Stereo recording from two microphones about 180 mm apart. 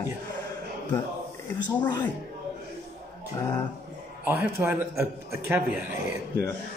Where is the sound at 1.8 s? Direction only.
25° left (ahead or behind).